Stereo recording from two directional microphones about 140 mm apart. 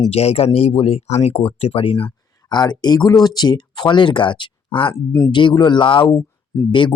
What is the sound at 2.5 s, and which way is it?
Speech, 30° left (ahead or behind).